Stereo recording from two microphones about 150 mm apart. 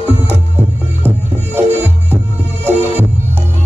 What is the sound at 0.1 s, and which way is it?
Music, 15° right (ahead or behind).